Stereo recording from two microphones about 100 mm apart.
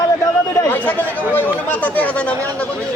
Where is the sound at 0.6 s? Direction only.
20° left (ahead or behind).